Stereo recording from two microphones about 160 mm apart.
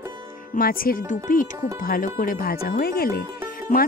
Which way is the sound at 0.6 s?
65° left (ahead or behind).